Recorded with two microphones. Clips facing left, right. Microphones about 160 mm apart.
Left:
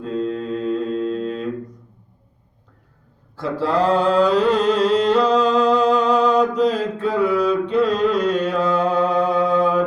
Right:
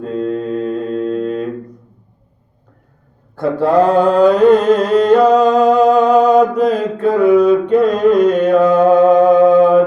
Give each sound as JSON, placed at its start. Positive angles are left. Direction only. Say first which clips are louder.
{"t": 0.0, "sound": "mantra", "louder": "right 5 dB", "side_deg": -50}
{"t": 3.3, "sound": "mantra", "louder": "right 8 dB", "side_deg": -55}